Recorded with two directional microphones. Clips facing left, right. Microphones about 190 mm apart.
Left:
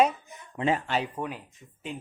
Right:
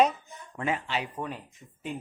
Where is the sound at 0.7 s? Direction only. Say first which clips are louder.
Left 2 dB; 40° left (ahead or behind).